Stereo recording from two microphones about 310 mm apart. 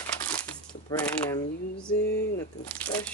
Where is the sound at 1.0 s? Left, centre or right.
Centre.